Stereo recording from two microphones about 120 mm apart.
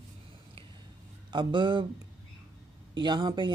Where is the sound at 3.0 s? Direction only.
35° right (ahead or behind).